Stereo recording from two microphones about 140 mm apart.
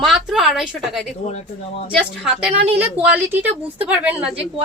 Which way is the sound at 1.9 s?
Centre (ahead or behind).